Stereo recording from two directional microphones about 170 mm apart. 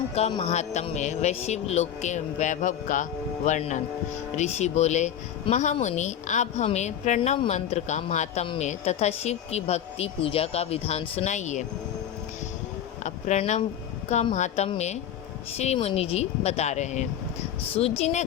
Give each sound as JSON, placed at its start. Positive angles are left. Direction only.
{"t": 0.1, "sound": "speech", "side_deg": 35}
{"t": 13.0, "sound": "speech", "side_deg": 45}